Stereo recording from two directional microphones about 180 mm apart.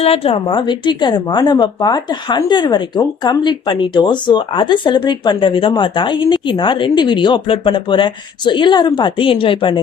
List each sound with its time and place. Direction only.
0.0 s a woman's voice: 30° left (ahead or behind)